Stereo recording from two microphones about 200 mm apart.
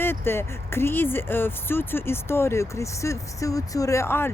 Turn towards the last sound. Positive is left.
turn(degrees=10)  # may be behind; listen again after turning